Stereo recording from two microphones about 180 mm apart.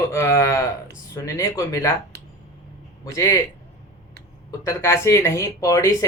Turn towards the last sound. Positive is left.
turn(degrees=20)  # may be behind; listen again after turning